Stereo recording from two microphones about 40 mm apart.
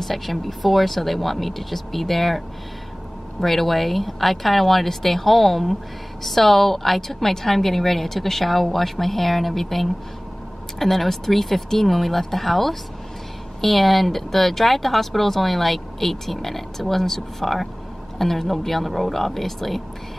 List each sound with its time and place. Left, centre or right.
0.0 s speech: centre